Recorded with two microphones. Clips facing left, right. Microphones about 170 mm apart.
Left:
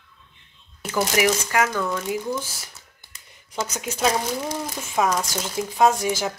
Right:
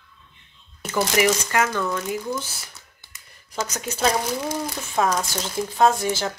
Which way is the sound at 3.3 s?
15° left (ahead or behind).